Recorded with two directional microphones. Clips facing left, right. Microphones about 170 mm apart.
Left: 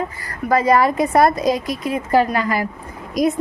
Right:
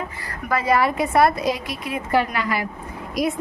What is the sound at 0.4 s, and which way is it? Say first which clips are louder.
A woman's voice: left 5 dB; 40° left (ahead or behind).